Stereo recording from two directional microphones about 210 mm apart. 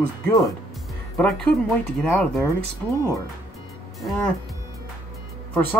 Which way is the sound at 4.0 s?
Centre (ahead or behind).